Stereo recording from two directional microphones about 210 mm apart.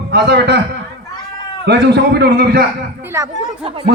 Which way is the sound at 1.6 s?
50° right (ahead or behind).